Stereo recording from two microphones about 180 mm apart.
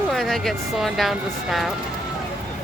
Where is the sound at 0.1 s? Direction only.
Centre (ahead or behind).